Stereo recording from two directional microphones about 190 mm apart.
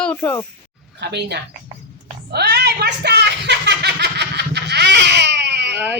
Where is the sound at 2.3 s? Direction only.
60° right (ahead or behind).